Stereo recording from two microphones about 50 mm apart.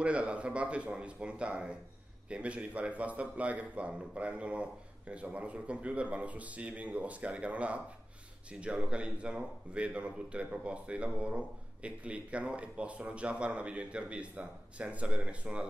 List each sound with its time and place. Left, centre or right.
0.0 s speech: right